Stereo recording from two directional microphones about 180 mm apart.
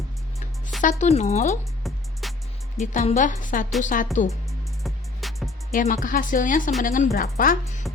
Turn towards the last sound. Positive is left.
turn(degrees=55)  # may be behind; listen again after turning